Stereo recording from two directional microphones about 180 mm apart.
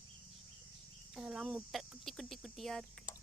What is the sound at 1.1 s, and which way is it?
Speech, 5° right (ahead or behind).